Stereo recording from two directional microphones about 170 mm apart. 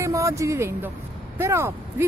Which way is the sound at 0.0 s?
15° right (ahead or behind).